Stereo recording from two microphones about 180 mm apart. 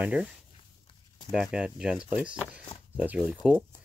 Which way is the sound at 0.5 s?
25° left (ahead or behind).